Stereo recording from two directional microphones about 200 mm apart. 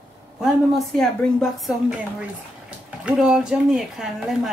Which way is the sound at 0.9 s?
Centre (ahead or behind).